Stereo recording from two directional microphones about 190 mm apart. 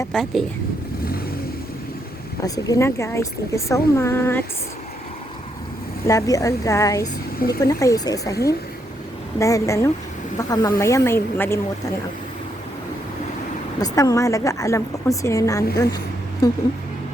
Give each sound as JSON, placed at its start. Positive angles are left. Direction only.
{"t": 0.1, "sound": "speech", "side_deg": 0}
{"t": 2.4, "sound": "speech", "side_deg": 15}
{"t": 6.1, "sound": "speech", "side_deg": 15}
{"t": 9.4, "sound": "speech", "side_deg": 15}
{"t": 13.7, "sound": "speech", "side_deg": 20}